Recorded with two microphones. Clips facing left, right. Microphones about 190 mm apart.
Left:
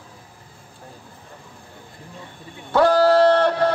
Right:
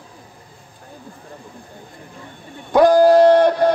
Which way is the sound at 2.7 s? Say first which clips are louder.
Right 4 dB; 15° right (ahead or behind).